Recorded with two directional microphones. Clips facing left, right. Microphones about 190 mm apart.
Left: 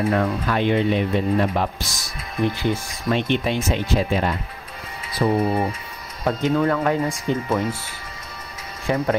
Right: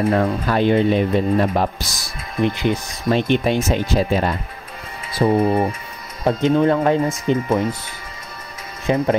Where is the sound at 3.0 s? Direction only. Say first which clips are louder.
Right 4 dB; 40° right (ahead or behind); by 7.8 s 20° right (ahead or behind).